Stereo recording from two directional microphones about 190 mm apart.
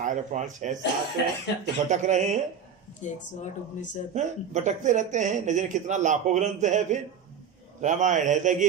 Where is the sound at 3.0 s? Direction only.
40° left (ahead or behind).